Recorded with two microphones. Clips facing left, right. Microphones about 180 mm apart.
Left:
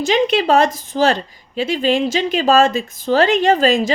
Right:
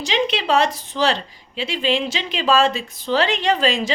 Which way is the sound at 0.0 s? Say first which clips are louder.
Left 6 dB; 45° left (ahead or behind).